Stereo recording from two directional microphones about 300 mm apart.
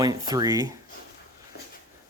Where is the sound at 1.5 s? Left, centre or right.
Left.